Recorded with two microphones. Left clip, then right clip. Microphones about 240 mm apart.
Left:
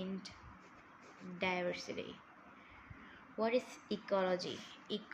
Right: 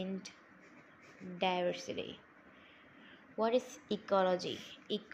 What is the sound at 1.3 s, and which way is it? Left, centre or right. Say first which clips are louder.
Speech: right 4 dB; centre.